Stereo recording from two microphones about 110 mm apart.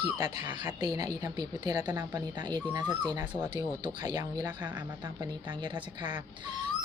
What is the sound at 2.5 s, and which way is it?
A woman's voice, 40° right (ahead or behind).